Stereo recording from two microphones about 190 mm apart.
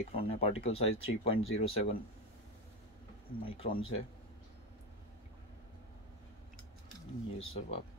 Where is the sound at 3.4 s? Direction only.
30° left (ahead or behind).